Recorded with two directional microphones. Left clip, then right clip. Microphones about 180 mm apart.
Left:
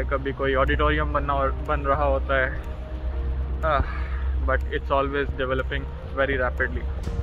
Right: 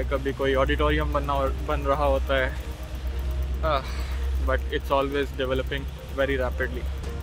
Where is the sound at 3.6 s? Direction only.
15° right (ahead or behind).